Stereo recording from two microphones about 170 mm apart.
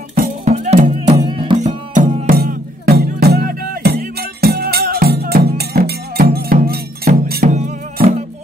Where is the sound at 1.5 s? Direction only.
45° right (ahead or behind); by 7.1 s 65° right (ahead or behind).